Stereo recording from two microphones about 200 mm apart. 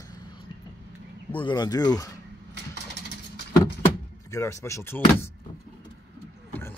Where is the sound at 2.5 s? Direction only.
60° right (ahead or behind).